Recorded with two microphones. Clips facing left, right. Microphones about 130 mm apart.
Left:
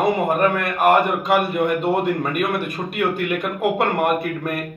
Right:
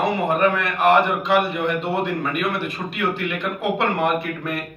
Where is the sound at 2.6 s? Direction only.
50° left (ahead or behind).